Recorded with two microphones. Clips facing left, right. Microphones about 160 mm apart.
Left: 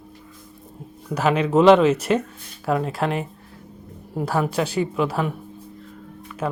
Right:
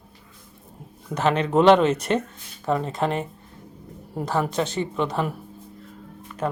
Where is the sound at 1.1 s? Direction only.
10° left (ahead or behind).